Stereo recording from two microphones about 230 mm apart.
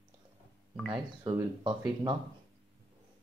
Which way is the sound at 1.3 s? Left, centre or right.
Centre.